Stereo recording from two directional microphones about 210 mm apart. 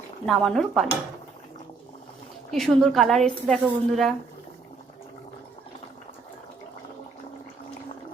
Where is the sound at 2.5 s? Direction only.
Centre (ahead or behind).